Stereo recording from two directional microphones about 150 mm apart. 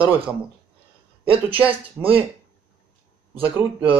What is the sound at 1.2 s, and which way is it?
Speech, 35° right (ahead or behind).